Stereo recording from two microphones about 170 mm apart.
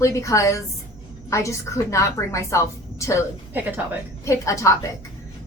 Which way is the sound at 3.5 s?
10° right (ahead or behind).